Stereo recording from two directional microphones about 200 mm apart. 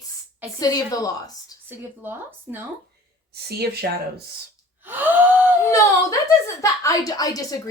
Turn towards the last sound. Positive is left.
turn(degrees=20)  # may be behind; listen again after turning